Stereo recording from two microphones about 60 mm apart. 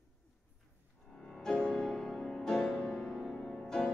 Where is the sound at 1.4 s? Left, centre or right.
Centre.